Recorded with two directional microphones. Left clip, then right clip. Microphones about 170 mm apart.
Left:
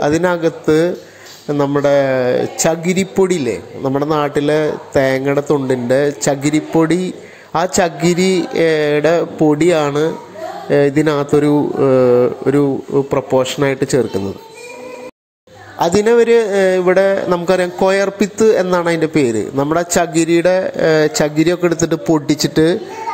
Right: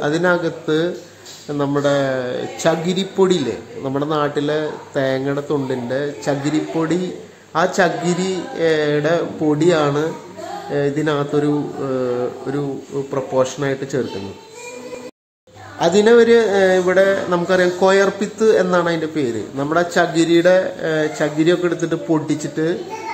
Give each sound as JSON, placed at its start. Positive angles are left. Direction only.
{"t": 0.0, "sound": "a man's voice", "side_deg": 25}
{"t": 16.0, "sound": "speech", "side_deg": 30}